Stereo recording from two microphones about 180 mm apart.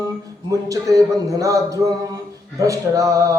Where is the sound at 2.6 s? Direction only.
20° right (ahead or behind).